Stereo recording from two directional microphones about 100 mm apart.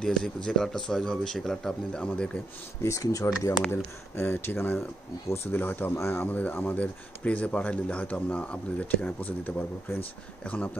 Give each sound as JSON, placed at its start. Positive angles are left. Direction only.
{"t": 0.0, "sound": "speech", "side_deg": 5}
{"t": 2.8, "sound": "speech", "side_deg": 30}
{"t": 3.7, "sound": "speech", "side_deg": 20}